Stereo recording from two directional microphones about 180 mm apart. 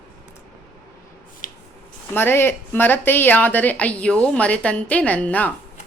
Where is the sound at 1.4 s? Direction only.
45° left (ahead or behind).